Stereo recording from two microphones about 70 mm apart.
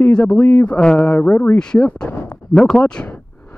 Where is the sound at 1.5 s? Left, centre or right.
Centre.